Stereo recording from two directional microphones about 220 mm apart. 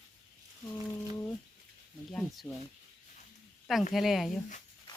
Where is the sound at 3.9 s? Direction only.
Centre (ahead or behind).